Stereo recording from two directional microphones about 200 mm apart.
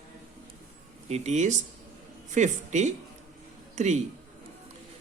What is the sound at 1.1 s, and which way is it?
A man's voice, 35° right (ahead or behind).